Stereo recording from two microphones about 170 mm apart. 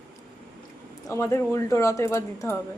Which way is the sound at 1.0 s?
15° left (ahead or behind).